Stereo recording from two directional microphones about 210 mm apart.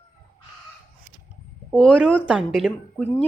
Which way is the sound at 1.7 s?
5° left (ahead or behind).